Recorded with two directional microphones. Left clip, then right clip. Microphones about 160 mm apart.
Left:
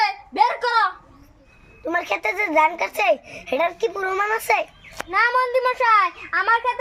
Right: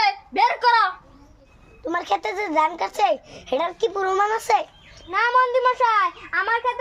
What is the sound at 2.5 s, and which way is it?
A child's voice, 20° right (ahead or behind).